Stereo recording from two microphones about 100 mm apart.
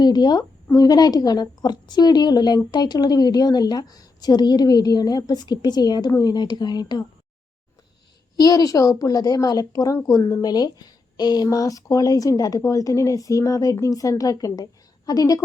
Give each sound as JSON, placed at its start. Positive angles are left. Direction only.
{"t": 0.0, "sound": "a woman's voice", "side_deg": 40}
{"t": 8.4, "sound": "a woman's voice", "side_deg": 40}